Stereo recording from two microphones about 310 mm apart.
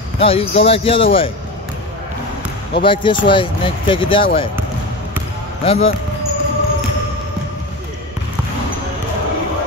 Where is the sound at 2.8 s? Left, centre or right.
Centre.